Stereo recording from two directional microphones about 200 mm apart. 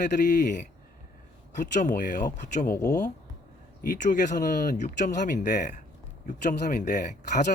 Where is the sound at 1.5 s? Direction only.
40° left (ahead or behind).